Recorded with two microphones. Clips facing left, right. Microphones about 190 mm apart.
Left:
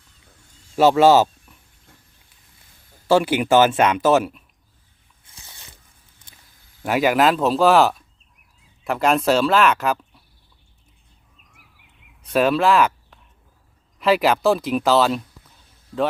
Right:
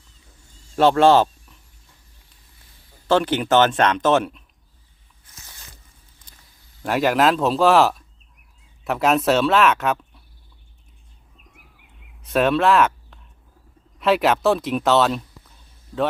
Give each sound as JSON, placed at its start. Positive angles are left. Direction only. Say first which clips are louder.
{"t": 0.8, "sound": "speech", "louder": "left 1 dB", "side_deg": 5}
{"t": 3.1, "sound": "speech", "louder": "left 2 dB", "side_deg": 10}
{"t": 5.5, "sound": "a sound", "louder": "left 1 dB", "side_deg": 25}
{"t": 6.8, "sound": "speech", "louder": "left 1 dB", "side_deg": 0}
{"t": 12.2, "sound": "speech", "louder": "even", "side_deg": 0}